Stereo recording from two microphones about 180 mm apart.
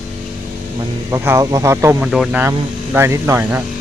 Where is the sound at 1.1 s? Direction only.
15° right (ahead or behind).